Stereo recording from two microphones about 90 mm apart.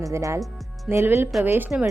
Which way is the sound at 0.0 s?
35° right (ahead or behind).